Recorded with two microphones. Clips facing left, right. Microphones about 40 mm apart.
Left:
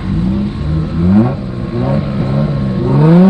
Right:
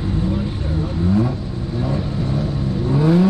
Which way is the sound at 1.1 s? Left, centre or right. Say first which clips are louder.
Left 9 dB; left.